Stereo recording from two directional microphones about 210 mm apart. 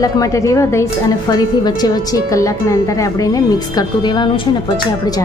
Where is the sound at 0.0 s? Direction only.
15° left (ahead or behind).